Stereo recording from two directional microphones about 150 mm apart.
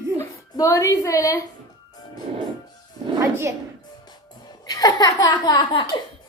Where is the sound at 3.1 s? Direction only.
15° right (ahead or behind).